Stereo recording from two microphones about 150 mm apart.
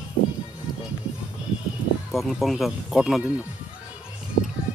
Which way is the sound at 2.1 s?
Centre (ahead or behind).